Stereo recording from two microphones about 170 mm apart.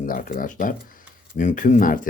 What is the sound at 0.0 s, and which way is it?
Speech, 55° left (ahead or behind).